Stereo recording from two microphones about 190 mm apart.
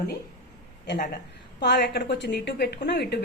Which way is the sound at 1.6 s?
60° left (ahead or behind).